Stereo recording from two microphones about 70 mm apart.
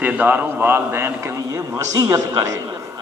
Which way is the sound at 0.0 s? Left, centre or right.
Right.